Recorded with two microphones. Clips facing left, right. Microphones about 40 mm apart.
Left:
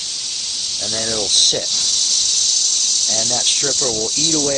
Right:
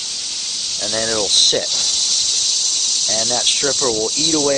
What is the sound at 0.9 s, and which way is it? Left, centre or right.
Speech, right.